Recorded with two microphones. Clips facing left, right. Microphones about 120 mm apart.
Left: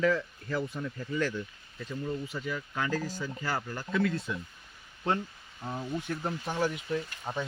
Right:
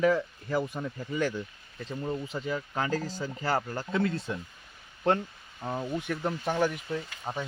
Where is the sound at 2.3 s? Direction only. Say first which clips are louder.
Right 3 dB; 30° right (ahead or behind).